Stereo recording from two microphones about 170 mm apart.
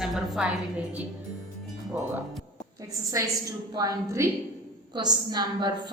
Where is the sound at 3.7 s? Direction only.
20° right (ahead or behind).